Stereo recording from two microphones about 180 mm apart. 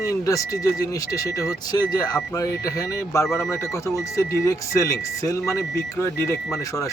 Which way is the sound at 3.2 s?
Centre (ahead or behind).